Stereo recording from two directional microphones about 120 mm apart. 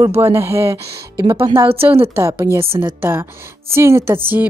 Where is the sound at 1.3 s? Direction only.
45° right (ahead or behind).